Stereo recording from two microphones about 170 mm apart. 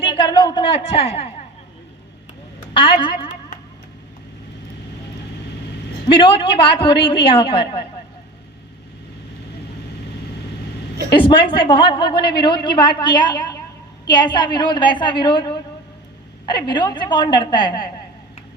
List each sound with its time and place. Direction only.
0.0 s a sound: 30° left (ahead or behind)
2.7 s a woman's voice: 30° left (ahead or behind)
6.1 s a woman's voice: 30° left (ahead or behind)
11.1 s a woman's voice: 30° left (ahead or behind)